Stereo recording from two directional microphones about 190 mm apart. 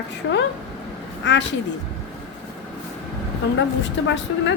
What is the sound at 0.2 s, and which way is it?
A woman's voice, 75° left (ahead or behind).